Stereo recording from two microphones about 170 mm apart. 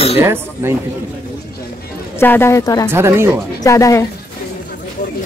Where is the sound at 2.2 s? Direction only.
15° left (ahead or behind).